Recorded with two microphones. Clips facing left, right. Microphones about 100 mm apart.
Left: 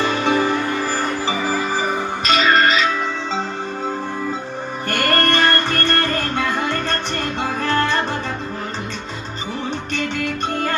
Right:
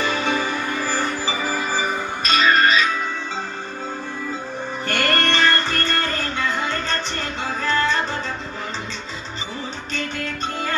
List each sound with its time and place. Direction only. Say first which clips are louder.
0.0 s music: left 4 dB; 55° left (ahead or behind)
4.9 s music: left 3 dB; 45° left (ahead or behind)
9.9 s music: left 3 dB; 60° left (ahead or behind)